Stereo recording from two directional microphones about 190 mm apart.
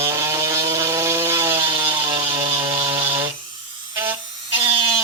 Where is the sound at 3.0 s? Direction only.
10° right (ahead or behind).